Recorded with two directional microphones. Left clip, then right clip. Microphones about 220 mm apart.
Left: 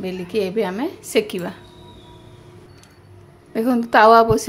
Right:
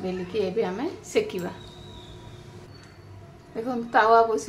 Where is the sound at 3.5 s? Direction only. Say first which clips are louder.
Left 7 dB; 40° left (ahead or behind).